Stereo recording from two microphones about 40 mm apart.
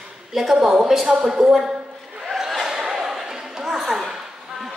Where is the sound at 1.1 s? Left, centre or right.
Right.